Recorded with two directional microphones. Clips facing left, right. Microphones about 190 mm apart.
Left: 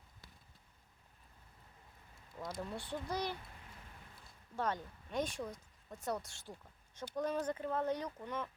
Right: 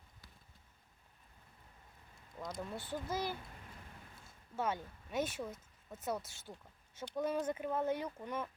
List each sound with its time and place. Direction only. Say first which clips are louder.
2.4 s speech: even; centre (ahead or behind)
4.5 s speech: even; 5° right (ahead or behind)
7.4 s speech: right 1 dB; 20° right (ahead or behind)
7.7 s speech: right 1 dB; 10° right (ahead or behind)